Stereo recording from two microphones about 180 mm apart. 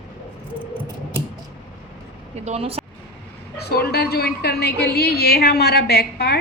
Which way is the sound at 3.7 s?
60° left (ahead or behind).